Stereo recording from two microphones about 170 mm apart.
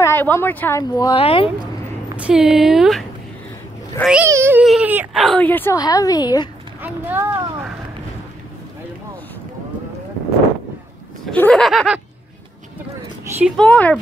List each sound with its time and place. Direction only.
0.0 s speech: 15° left (ahead or behind); by 1.5 s 35° left (ahead or behind)
2.1 s speech: 5° right (ahead or behind)
5.2 s a woman's voice: 5° left (ahead or behind); by 6.5 s 25° left (ahead or behind)
6.8 s speech: 10° right (ahead or behind)
11.2 s speech: 5° left (ahead or behind)
13.6 s speech: 10° left (ahead or behind)